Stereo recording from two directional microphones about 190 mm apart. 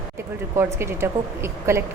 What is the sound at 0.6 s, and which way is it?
A woman's voice, 15° right (ahead or behind).